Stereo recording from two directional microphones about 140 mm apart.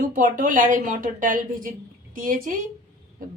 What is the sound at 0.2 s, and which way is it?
A woman's voice, 75° right (ahead or behind).